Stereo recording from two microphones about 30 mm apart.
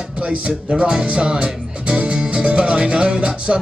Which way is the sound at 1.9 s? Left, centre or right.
Right.